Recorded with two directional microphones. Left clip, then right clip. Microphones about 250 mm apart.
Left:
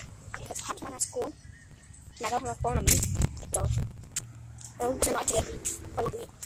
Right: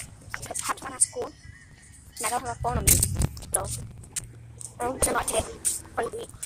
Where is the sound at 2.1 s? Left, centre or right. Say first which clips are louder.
Right 2 dB; centre.